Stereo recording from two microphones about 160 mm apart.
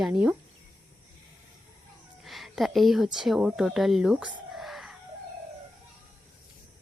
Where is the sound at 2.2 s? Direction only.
Centre (ahead or behind).